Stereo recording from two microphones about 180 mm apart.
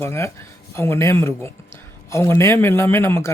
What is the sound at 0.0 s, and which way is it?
Speech, 15° left (ahead or behind).